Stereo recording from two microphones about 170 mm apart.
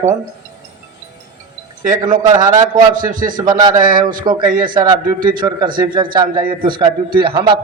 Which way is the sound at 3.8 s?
55° right (ahead or behind).